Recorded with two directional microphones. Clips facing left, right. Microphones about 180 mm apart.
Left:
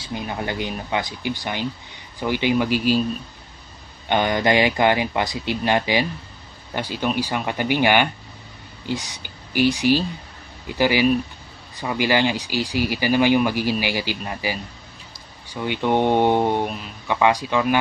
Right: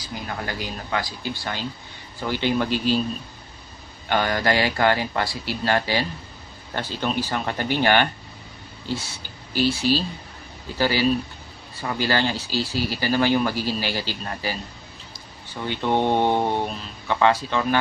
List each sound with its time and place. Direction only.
0.0 s speech: 20° left (ahead or behind)
4.1 s speech: 20° left (ahead or behind)